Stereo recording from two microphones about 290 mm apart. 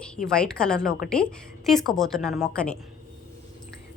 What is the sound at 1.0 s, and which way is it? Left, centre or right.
Speech, left.